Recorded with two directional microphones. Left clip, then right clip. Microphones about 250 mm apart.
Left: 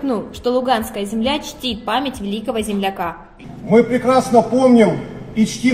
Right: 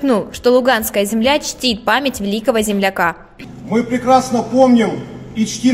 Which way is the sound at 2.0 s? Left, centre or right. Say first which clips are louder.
Right 5 dB; right.